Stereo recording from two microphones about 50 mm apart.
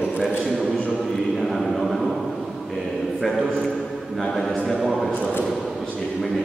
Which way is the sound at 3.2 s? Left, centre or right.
Centre.